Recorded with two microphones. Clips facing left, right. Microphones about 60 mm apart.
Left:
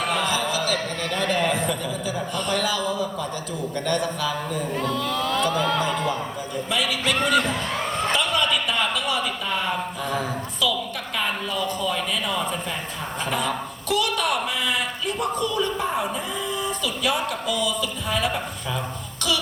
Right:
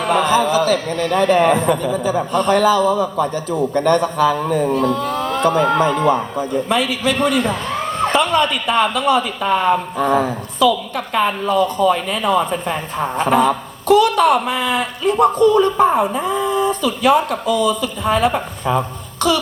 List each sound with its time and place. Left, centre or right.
0.0 s a man's voice: right
4.9 s a man's voice: right